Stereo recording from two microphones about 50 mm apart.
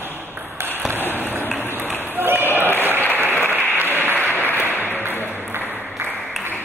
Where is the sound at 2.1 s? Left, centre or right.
Right.